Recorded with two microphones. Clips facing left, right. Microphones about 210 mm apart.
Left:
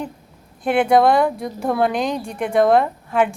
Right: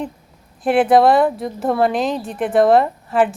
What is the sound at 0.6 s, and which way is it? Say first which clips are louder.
A woman's voice: right 2 dB; 5° right (ahead or behind).